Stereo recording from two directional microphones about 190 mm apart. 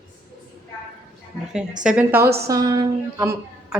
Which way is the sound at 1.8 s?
5° right (ahead or behind).